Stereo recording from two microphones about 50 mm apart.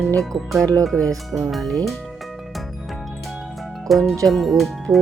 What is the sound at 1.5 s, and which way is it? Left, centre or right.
Speech, centre.